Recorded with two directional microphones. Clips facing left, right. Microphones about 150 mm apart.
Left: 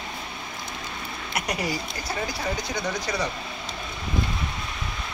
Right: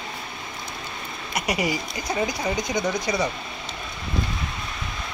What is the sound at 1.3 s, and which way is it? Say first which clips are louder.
Speech: right 3 dB; 10° right (ahead or behind).